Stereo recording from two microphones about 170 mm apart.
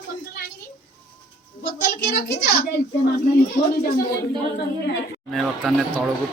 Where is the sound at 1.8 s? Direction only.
65° left (ahead or behind).